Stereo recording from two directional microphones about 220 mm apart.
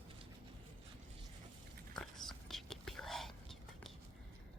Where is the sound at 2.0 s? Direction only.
Centre (ahead or behind).